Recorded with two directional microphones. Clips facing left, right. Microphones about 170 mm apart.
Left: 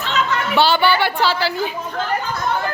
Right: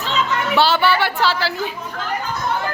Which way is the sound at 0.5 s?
Centre (ahead or behind).